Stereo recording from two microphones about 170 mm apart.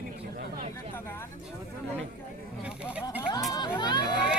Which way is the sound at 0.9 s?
15° left (ahead or behind).